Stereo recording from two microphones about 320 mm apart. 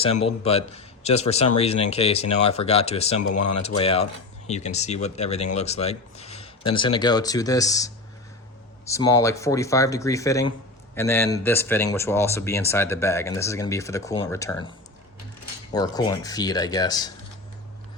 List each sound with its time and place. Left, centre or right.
0.0 s a man's voice: centre
3.3 s speech: left
3.8 s a man's voice: centre
15.7 s speech: centre